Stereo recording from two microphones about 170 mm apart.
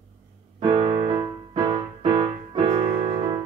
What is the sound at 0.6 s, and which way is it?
Music, 40° right (ahead or behind).